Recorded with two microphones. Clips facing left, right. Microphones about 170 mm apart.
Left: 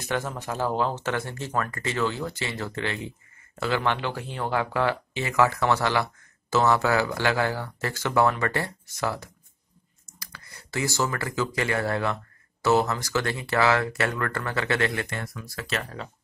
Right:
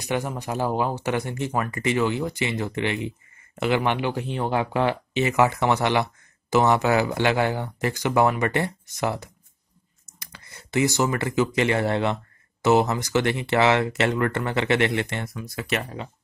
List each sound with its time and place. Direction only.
0.0 s speech: 15° right (ahead or behind)